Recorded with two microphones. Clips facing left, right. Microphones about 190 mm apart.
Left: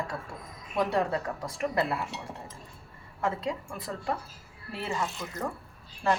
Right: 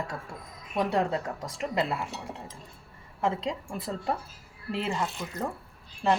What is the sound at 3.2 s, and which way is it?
Speech, 20° right (ahead or behind).